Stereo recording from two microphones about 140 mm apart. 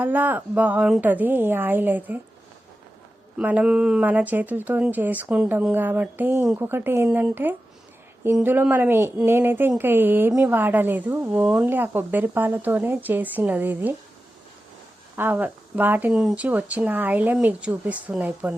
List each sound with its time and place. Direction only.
0.0 s a woman's voice: 10° right (ahead or behind)
3.3 s a woman's voice: 10° right (ahead or behind)
15.1 s a woman's voice: 15° right (ahead or behind)